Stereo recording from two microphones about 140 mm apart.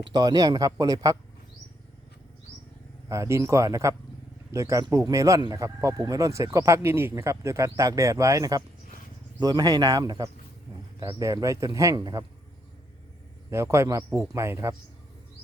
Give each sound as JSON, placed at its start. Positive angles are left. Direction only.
{"t": 0.0, "sound": "speech", "side_deg": -30}
{"t": 3.1, "sound": "speech", "side_deg": -20}
{"t": 13.5, "sound": "speech", "side_deg": -20}